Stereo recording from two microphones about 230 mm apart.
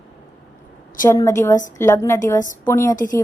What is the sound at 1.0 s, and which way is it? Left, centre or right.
A woman's voice, centre.